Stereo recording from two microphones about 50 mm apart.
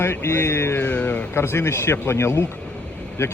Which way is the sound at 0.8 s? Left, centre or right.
Left.